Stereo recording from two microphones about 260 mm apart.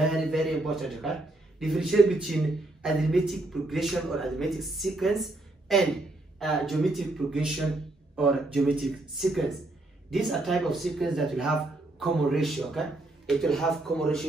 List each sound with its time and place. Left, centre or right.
0.0 s a man's voice: centre